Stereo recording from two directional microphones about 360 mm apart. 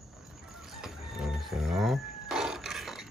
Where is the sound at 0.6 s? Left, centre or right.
Centre.